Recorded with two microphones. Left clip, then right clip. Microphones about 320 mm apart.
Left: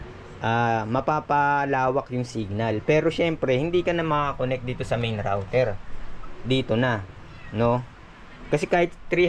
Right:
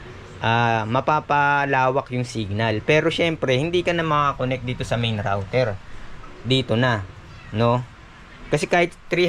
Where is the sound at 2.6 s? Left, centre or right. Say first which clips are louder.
Right 3 dB; centre.